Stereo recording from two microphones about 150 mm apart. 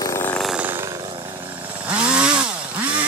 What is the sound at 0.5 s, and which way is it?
Wild animals, 10° right (ahead or behind).